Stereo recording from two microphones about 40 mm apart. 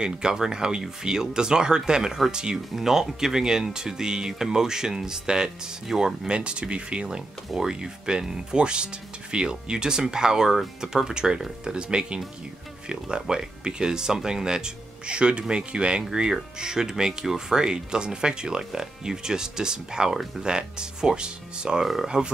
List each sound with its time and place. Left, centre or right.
0.0 s speech: centre
2.7 s speech: centre; by 7.1 s right
7.1 s speech: centre